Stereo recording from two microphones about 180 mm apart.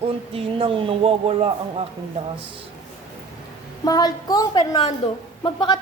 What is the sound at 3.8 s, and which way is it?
A woman's voice, 20° left (ahead or behind).